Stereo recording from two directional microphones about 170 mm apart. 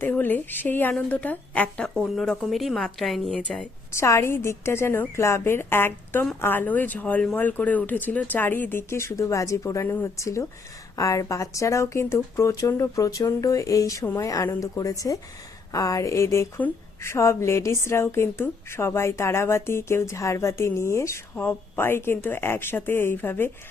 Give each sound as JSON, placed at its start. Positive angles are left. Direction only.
{"t": 0.0, "sound": "a woman's voice", "side_deg": 10}
{"t": 3.9, "sound": "a woman's voice", "side_deg": 15}